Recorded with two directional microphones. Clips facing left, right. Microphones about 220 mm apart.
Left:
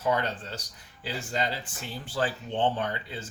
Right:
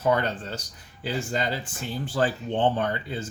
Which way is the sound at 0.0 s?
50° right (ahead or behind).